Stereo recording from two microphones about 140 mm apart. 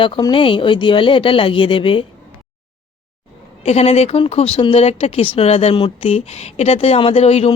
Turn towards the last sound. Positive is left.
turn(degrees=50)  # may be behind; listen again after turning